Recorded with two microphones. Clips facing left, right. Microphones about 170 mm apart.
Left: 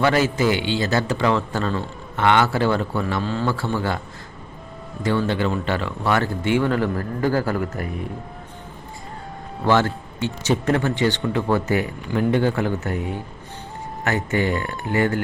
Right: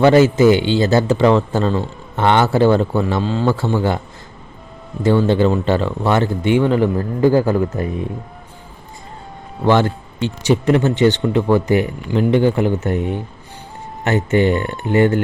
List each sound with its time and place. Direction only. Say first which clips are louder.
0.0 s a man's voice: right 8 dB; 25° right (ahead or behind)
5.0 s a man's voice: right 7 dB; 25° right (ahead or behind)
9.6 s a man's voice: right 4 dB; 15° right (ahead or behind)